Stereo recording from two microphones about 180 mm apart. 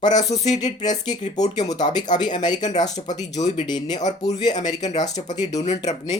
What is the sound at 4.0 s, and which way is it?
Speech, 40° left (ahead or behind).